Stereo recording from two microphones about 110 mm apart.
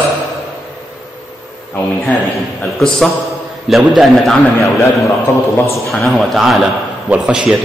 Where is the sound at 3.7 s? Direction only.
Centre (ahead or behind).